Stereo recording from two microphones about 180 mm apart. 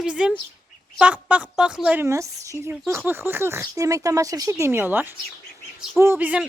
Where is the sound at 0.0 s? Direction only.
5° right (ahead or behind).